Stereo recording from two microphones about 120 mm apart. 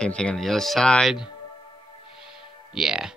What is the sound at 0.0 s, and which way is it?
Speech, 5° left (ahead or behind).